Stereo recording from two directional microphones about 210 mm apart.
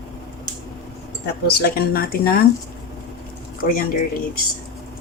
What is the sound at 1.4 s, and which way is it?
Speech, 50° left (ahead or behind).